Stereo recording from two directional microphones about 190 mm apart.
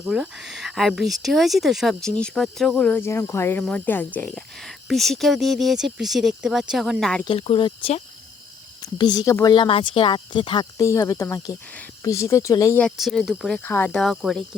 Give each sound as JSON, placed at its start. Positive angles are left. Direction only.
{"t": 0.0, "sound": "speech", "side_deg": -5}
{"t": 7.3, "sound": "speech", "side_deg": 30}
{"t": 12.8, "sound": "speech", "side_deg": 0}